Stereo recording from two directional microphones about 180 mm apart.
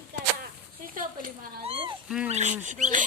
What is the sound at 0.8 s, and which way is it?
Speech, 50° right (ahead or behind).